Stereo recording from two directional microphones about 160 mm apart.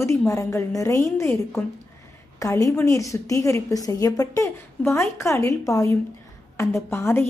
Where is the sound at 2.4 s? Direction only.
20° left (ahead or behind).